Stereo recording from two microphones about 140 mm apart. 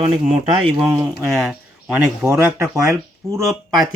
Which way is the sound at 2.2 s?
15° right (ahead or behind).